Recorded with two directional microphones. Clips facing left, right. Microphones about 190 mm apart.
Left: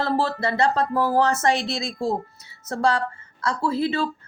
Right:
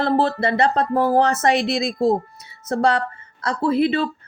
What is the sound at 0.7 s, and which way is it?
Speech, 20° right (ahead or behind).